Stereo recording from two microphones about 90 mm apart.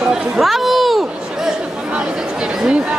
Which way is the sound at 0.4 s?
Centre (ahead or behind).